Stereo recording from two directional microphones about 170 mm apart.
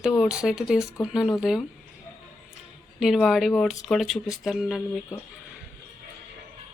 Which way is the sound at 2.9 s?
Centre (ahead or behind).